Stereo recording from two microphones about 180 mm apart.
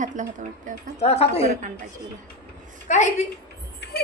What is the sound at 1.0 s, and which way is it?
Speech, 35° left (ahead or behind).